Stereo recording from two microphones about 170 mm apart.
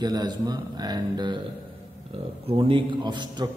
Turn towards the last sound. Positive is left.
turn(degrees=-25)  # may be behind; listen again after turning